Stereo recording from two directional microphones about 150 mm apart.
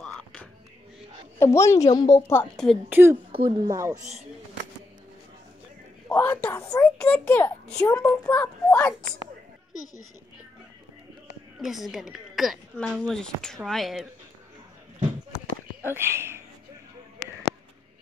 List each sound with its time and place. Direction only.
0.0 s music: 5° left (ahead or behind)
1.4 s a woman's voice: 20° left (ahead or behind)
2.5 s a woman's voice: centre (ahead or behind)
2.9 s speech: 15° right (ahead or behind)
3.3 s speech: 35° right (ahead or behind)
3.9 s speech: 50° right (ahead or behind)
6.0 s a woman's voice: 10° left (ahead or behind)
11.6 s a woman's voice: centre (ahead or behind)
15.3 s a sound: 15° right (ahead or behind)